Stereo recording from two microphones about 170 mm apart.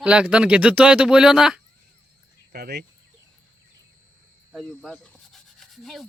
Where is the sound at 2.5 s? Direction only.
70° right (ahead or behind).